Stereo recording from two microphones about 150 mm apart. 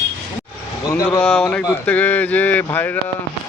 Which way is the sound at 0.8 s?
20° left (ahead or behind).